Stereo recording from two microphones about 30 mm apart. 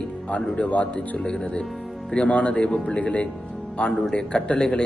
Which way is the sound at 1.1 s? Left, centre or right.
Left.